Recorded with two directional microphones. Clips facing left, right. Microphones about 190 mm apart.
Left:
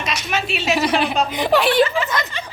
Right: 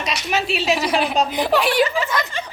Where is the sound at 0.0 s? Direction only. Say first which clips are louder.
Right 1 dB; 35° right (ahead or behind).